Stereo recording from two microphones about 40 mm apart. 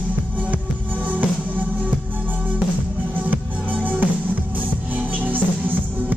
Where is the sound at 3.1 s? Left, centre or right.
Right.